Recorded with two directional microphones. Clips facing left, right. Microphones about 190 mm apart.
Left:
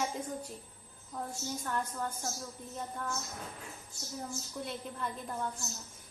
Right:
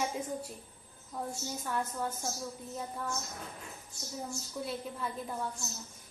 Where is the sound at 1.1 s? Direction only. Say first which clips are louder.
Right 1 dB; 5° right (ahead or behind).